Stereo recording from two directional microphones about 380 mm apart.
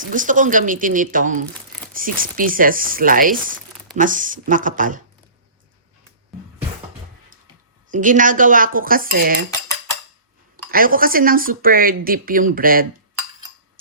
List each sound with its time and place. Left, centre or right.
0.0 s speech: right
7.9 s speech: centre
10.7 s speech: right